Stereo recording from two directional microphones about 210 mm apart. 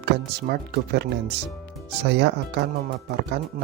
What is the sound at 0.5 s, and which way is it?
Speech, 50° right (ahead or behind).